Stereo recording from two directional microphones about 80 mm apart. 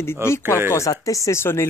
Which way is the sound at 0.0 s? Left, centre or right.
Left.